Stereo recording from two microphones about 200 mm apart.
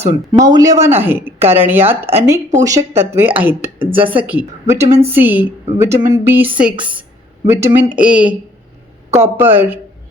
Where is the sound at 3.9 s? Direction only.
25° right (ahead or behind).